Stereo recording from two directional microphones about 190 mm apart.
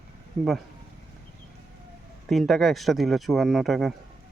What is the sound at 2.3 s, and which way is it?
Speech, centre (ahead or behind).